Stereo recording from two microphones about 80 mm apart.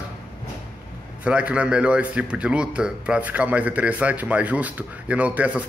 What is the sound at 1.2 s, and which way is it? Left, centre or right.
Speech, centre.